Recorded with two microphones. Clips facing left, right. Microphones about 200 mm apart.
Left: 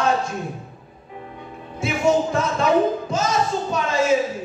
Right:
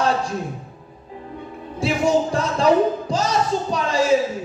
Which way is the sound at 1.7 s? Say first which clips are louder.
Right 1 dB; 35° right (ahead or behind).